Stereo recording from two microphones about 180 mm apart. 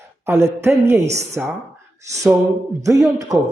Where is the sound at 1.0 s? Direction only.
40° right (ahead or behind).